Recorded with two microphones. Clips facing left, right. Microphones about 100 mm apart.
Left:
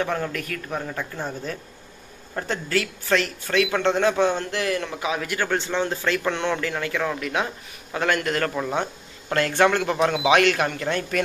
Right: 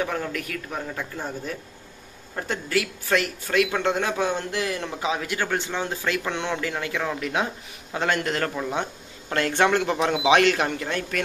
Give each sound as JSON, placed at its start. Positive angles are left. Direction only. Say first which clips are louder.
{"t": 0.0, "sound": "a man's voice", "louder": "left 2 dB", "side_deg": -5}
{"t": 5.5, "sound": "a man's voice", "louder": "left 3 dB", "side_deg": -10}
{"t": 8.5, "sound": "speech", "louder": "left 2 dB", "side_deg": 0}
{"t": 9.3, "sound": "a man's voice", "louder": "left 1 dB", "side_deg": -20}